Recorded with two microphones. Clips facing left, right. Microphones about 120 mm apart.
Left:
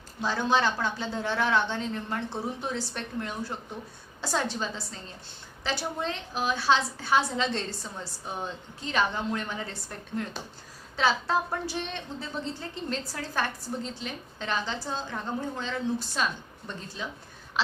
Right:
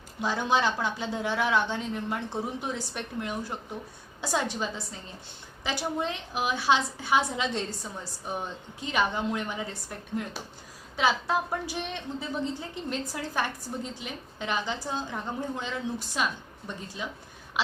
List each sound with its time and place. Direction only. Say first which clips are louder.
0.2 s speech: even; 15° right (ahead or behind)
8.8 s speech: even; 15° right (ahead or behind)